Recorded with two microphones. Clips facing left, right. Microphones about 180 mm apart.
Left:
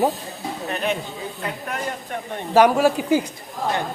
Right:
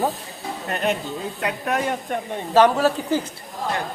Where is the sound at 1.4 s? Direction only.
80° right.